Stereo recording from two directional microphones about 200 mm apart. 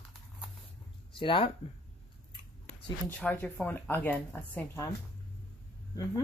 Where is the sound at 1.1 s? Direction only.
25° left (ahead or behind).